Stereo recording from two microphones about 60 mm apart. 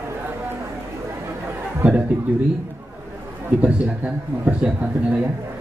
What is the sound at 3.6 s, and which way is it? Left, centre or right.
Speech, right.